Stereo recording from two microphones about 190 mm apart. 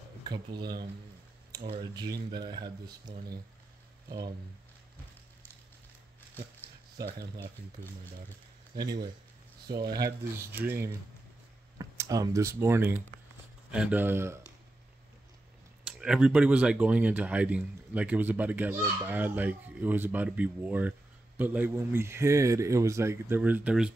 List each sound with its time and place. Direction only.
0.3 s speech: 25° right (ahead or behind)
8.7 s speech: 20° right (ahead or behind)
10.6 s speech: 10° right (ahead or behind)
16.0 s speech: 5° right (ahead or behind)